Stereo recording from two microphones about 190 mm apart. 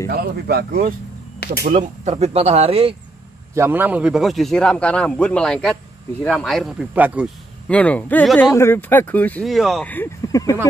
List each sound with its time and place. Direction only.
0.1 s speech: 55° right (ahead or behind); by 3.0 s 30° right (ahead or behind)
3.5 s a man's voice: 10° right (ahead or behind)
7.6 s speech: 5° left (ahead or behind)